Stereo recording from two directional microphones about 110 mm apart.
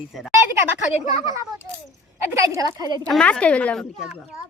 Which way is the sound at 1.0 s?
35° right (ahead or behind).